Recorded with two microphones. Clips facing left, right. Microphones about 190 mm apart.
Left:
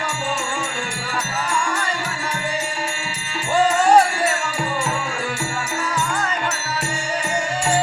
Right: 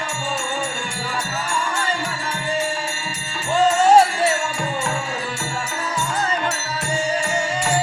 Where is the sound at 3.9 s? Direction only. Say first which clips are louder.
Right 2 dB; 25° right (ahead or behind).